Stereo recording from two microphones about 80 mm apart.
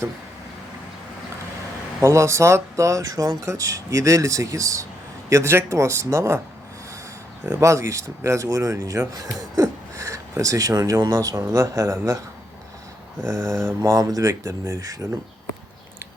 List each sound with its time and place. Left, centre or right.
2.0 s speech: right
7.6 s speech: right
13.2 s speech: right